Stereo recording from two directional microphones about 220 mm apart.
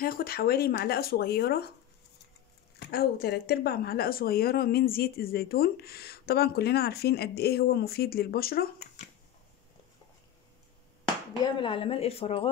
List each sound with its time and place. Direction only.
0.0 s speech: 40° left (ahead or behind)
2.8 s speech: 45° left (ahead or behind)
11.4 s speech: 20° left (ahead or behind)